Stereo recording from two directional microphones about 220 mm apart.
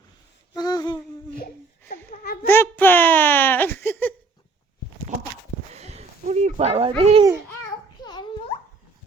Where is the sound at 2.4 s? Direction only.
10° left (ahead or behind).